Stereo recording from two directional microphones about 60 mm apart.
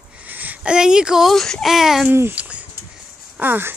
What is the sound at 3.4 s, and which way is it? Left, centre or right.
Speech, right.